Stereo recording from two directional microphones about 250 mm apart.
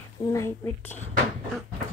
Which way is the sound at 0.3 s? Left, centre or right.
Centre.